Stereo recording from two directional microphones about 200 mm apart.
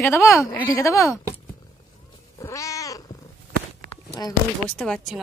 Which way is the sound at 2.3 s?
15° left (ahead or behind).